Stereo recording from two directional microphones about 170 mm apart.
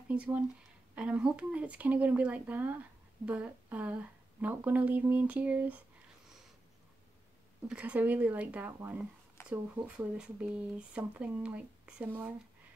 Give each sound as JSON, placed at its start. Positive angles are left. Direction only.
{"t": 0.1, "sound": "speech", "side_deg": -5}
{"t": 7.6, "sound": "speech", "side_deg": -5}